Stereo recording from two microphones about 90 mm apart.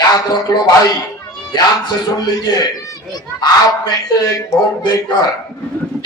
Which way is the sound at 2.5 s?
50° left (ahead or behind).